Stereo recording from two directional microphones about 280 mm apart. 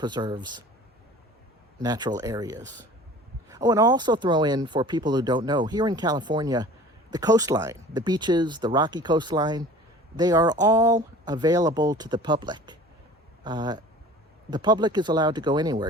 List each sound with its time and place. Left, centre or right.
0.0 s speech: centre
1.8 s speech: centre